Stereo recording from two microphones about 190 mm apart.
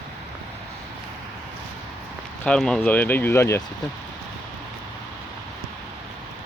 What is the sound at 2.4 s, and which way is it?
Speech, 5° left (ahead or behind).